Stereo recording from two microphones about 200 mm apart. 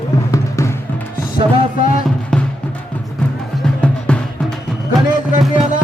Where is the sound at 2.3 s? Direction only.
5° left (ahead or behind).